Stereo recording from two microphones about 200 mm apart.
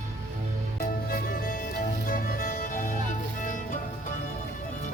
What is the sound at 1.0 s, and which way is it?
Music, 45° left (ahead or behind).